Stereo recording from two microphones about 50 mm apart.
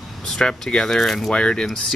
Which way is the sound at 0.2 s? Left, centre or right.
Centre.